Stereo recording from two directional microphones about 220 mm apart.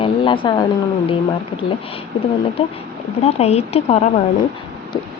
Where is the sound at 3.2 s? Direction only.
30° left (ahead or behind).